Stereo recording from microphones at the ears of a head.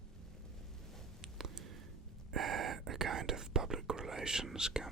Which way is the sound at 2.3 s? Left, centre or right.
Right.